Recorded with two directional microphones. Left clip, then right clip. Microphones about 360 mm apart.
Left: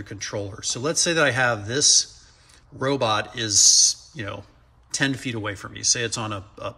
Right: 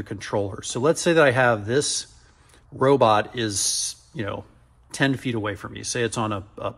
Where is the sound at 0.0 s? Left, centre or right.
Centre.